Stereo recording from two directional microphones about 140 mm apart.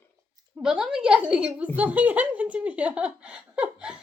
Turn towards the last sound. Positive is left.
turn(degrees=-5)  # may be behind; listen again after turning